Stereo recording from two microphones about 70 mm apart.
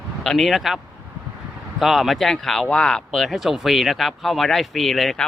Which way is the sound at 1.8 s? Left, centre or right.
Centre.